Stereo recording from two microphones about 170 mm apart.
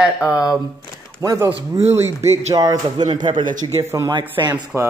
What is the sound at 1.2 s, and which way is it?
Speech, 20° right (ahead or behind).